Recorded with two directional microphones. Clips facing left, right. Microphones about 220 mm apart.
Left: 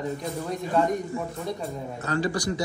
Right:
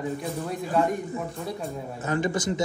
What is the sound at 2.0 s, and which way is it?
Speech, 20° right (ahead or behind).